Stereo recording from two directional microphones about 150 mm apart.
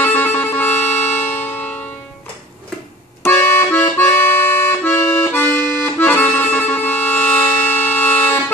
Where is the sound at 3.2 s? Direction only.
15° left (ahead or behind).